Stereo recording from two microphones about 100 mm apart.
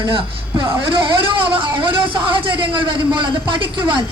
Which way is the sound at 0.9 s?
60° right (ahead or behind).